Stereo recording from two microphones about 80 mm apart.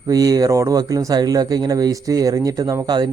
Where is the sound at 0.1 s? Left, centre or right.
Right.